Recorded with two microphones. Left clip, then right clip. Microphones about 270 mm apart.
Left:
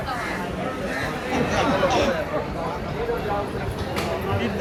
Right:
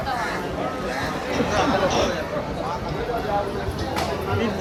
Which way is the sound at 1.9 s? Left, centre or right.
Centre.